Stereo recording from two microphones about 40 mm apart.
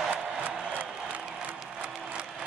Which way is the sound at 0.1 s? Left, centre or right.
Right.